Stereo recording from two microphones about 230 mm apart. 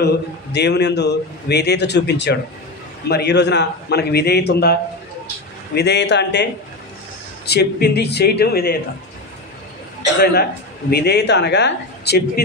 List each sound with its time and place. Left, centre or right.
0.0 s a man's voice: left
5.8 s a man's voice: left
7.4 s a man's voice: left
10.2 s a man's voice: left